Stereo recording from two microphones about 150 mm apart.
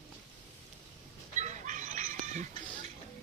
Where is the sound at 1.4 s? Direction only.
55° right (ahead or behind).